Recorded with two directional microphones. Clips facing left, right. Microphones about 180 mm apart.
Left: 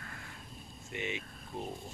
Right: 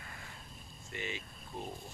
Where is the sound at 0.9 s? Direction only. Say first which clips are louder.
Left 3 dB; 20° left (ahead or behind).